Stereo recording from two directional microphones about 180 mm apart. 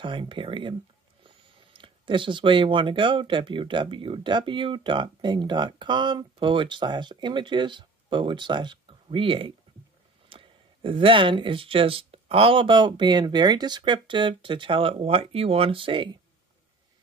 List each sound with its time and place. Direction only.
0.0 s speech: 25° right (ahead or behind)